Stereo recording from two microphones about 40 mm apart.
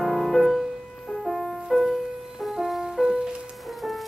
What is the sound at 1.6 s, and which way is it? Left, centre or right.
Music, centre.